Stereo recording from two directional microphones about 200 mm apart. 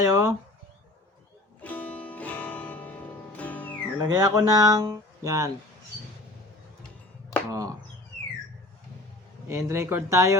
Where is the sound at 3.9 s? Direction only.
20° right (ahead or behind).